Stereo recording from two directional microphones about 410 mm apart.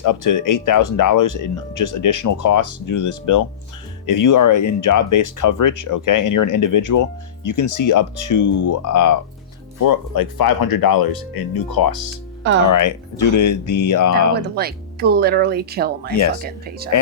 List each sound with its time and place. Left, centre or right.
0.0 s speech: left
12.7 s speech: left
14.5 s speech: right